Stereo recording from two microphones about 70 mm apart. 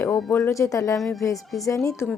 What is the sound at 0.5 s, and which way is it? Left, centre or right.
Speech, left.